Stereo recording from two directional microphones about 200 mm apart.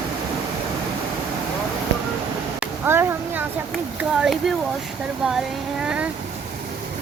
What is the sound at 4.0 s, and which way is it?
Speech, centre (ahead or behind).